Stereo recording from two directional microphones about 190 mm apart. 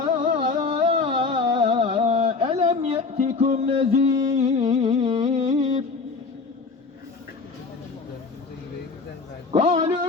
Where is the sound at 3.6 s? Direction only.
30° right (ahead or behind).